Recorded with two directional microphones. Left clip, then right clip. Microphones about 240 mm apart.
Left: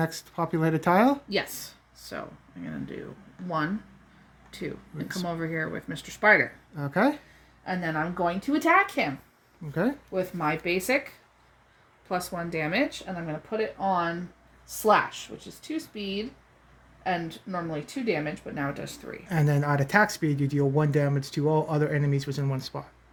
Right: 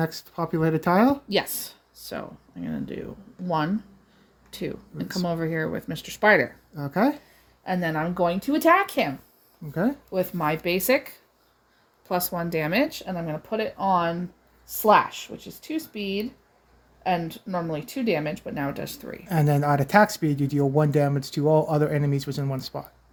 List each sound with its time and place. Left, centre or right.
0.0 s speech: centre
1.3 s speech: right
4.5 s speech: right
6.7 s speech: centre
7.6 s speech: right
10.1 s speech: right
12.0 s speech: right
19.2 s speech: centre